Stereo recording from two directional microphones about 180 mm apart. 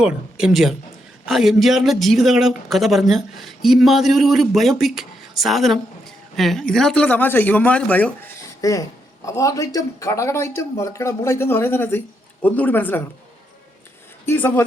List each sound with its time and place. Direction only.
0.0 s speech: 5° right (ahead or behind)
8.6 s speech: 20° left (ahead or behind)
14.3 s speech: 10° left (ahead or behind)